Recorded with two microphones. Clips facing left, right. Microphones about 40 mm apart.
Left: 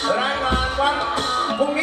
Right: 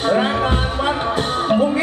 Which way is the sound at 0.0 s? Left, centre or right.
Right.